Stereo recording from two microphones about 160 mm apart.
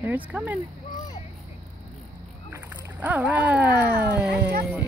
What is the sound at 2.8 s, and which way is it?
Speech, 10° right (ahead or behind).